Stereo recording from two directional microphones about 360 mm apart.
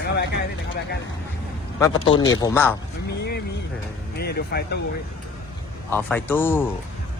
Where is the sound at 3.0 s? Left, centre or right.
Left.